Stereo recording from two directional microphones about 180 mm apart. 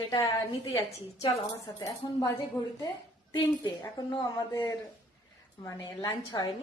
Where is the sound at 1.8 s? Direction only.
20° left (ahead or behind).